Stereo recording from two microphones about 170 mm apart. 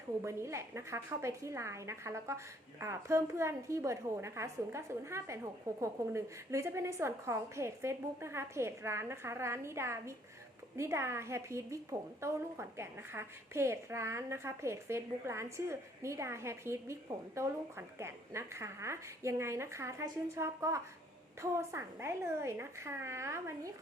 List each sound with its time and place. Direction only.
0.3 s a woman's voice: 15° right (ahead or behind)